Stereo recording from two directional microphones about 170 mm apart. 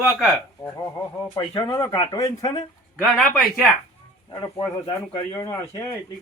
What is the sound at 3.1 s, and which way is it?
Speech, centre (ahead or behind).